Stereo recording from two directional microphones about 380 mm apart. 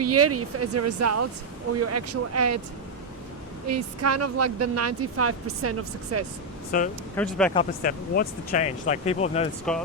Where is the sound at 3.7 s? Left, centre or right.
Right.